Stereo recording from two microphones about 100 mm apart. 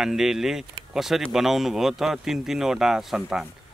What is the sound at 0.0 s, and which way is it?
Speech, 5° right (ahead or behind).